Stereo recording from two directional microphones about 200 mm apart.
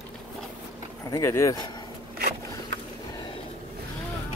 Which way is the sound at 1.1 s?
15° left (ahead or behind).